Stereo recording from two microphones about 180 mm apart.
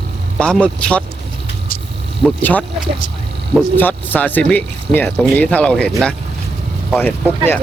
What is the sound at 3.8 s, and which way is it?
Speech, 10° left (ahead or behind).